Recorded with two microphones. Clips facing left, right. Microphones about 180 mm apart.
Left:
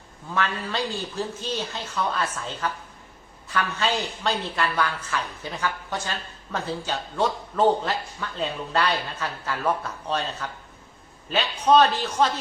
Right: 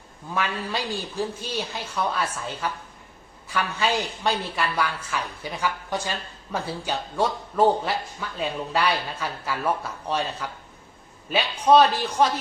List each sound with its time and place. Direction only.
0.3 s a woman's voice: 10° right (ahead or behind)